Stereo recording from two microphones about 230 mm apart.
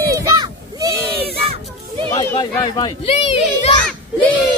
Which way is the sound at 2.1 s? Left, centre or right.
Centre.